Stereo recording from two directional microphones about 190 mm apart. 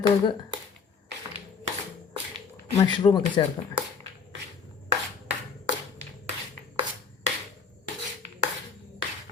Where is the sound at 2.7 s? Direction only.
20° left (ahead or behind).